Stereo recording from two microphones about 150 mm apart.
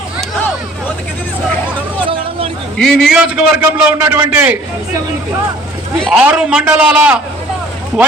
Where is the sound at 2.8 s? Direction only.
5° left (ahead or behind).